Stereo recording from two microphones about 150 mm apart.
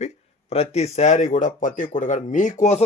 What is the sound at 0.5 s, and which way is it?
Speech, 45° left (ahead or behind).